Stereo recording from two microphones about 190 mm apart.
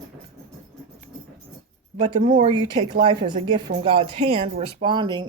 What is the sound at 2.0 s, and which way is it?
Speech, 25° right (ahead or behind).